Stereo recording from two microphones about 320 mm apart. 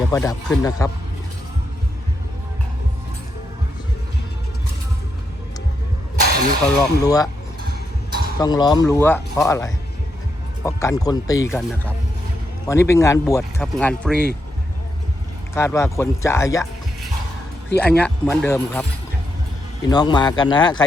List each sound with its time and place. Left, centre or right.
0.1 s speech: centre
6.2 s a sound: right
6.7 s speech: centre
8.4 s speech: centre
12.6 s speech: centre
15.5 s speech: centre
17.7 s speech: centre